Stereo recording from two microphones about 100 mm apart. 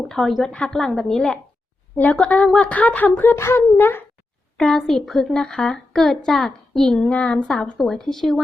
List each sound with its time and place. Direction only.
0.1 s speech: centre (ahead or behind); by 4.0 s 20° left (ahead or behind)
4.5 s speech: 5° left (ahead or behind)